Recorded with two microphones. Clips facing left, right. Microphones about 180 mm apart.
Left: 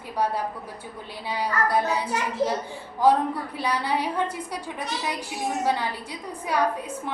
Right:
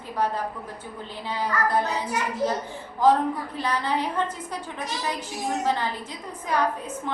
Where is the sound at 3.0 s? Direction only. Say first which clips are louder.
Even; 10° left (ahead or behind).